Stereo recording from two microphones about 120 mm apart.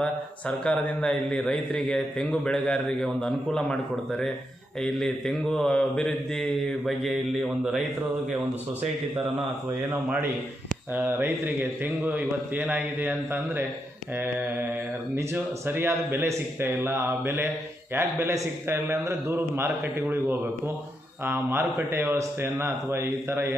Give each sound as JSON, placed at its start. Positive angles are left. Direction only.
{"t": 0.5, "sound": "a man's voice", "side_deg": 5}
{"t": 11.0, "sound": "a man's voice", "side_deg": -15}